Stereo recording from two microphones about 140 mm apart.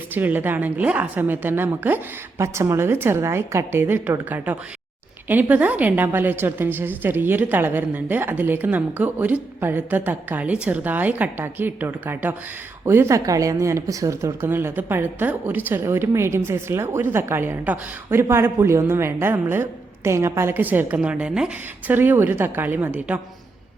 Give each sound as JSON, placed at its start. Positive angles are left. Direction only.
{"t": 0.1, "sound": "a woman's voice", "side_deg": -15}